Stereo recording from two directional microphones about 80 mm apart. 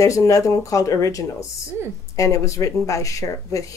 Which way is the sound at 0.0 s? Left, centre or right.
Left.